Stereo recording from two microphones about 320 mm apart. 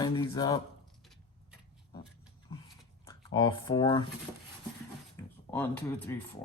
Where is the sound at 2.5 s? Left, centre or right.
Centre.